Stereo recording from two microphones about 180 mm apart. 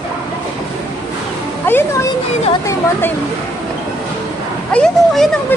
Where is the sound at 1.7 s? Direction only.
15° left (ahead or behind).